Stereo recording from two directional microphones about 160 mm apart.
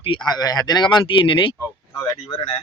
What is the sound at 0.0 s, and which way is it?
Speech, 30° left (ahead or behind).